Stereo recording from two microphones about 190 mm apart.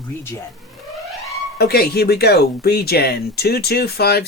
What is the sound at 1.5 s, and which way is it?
Speech, 55° left (ahead or behind).